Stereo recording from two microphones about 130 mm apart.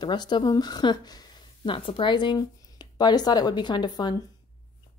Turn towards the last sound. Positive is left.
turn(degrees=35)  # may be behind; listen again after turning